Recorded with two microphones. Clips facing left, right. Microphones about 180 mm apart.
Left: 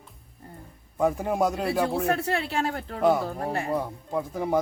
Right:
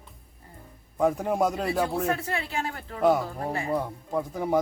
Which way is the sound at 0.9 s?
5° left (ahead or behind).